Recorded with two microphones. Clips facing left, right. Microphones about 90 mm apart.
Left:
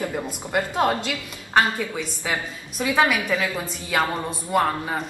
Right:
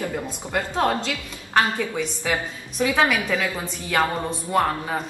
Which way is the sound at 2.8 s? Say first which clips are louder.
Even; 10° left (ahead or behind).